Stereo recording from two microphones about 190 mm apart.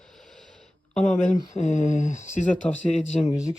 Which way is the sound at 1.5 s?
40° left (ahead or behind).